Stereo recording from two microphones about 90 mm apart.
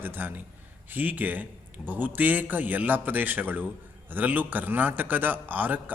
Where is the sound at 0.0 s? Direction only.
25° right (ahead or behind).